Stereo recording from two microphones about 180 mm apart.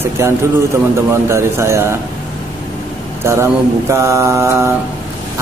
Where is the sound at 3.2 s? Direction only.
15° right (ahead or behind).